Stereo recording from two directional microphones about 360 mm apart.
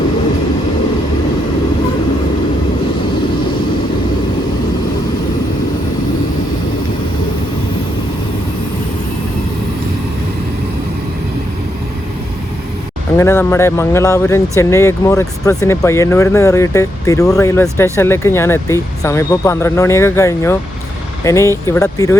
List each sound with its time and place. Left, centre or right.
13.1 s speech: centre